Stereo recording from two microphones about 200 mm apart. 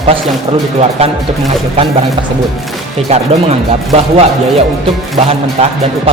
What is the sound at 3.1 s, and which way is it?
Speech, 30° right (ahead or behind).